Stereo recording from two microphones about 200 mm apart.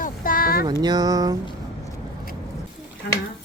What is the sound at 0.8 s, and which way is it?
Speech, 20° right (ahead or behind).